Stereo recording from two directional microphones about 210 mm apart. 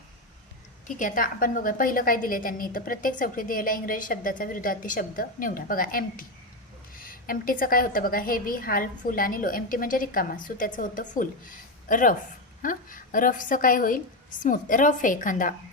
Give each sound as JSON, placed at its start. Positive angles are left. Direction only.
{"t": 0.9, "sound": "a woman's voice", "side_deg": 40}